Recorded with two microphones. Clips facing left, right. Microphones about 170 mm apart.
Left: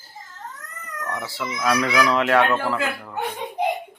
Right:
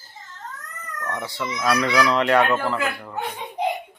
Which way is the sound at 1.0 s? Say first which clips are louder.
Right 1 dB; 5° left (ahead or behind).